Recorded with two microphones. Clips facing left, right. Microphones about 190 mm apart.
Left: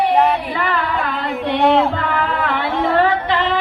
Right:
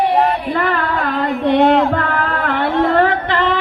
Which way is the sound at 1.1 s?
45° right (ahead or behind).